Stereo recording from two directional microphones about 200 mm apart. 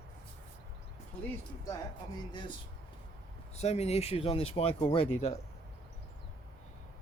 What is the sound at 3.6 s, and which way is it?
Speech, 35° left (ahead or behind).